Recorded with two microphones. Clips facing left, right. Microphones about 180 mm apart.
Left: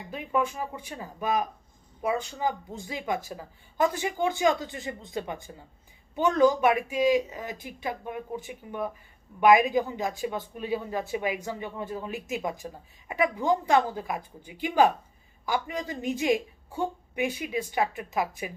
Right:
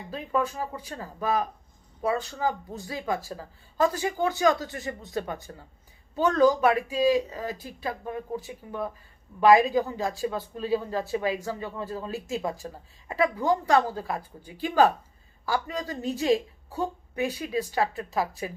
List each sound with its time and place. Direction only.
0.1 s speech: 15° left (ahead or behind)